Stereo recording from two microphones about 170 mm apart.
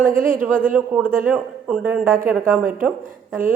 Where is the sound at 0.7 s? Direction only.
10° right (ahead or behind).